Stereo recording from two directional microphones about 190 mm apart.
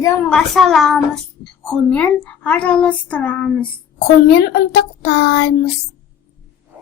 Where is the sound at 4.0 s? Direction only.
60° left (ahead or behind).